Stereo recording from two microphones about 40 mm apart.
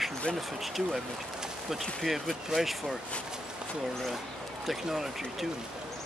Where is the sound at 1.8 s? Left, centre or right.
Centre.